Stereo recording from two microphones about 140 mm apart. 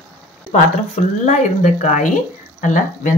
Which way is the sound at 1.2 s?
55° left (ahead or behind).